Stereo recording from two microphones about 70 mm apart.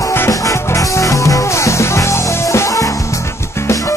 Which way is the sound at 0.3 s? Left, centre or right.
Left.